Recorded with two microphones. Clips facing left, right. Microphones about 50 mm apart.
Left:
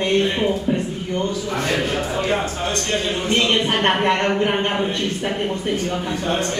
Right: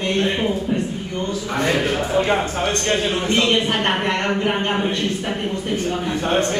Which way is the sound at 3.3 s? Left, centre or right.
Centre.